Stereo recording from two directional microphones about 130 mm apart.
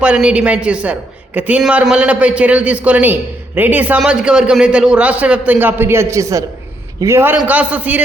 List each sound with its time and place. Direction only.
0.0 s a man's voice: 10° right (ahead or behind)